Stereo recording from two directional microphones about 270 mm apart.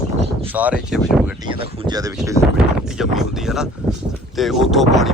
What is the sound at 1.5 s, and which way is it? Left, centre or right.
Speech, centre.